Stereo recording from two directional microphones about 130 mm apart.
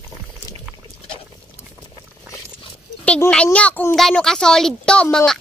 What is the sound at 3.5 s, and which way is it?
A child's voice, 10° left (ahead or behind).